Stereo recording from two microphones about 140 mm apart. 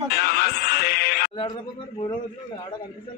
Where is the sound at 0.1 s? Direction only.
90° left.